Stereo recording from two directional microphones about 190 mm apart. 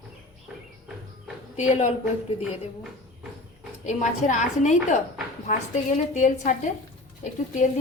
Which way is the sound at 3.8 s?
40° left (ahead or behind).